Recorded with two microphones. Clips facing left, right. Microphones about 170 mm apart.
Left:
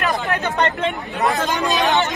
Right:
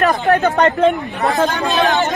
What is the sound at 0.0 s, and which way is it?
Speech, 40° right (ahead or behind).